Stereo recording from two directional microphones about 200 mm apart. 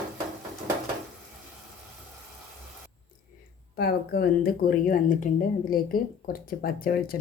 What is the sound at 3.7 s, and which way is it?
A woman's voice, 50° left (ahead or behind).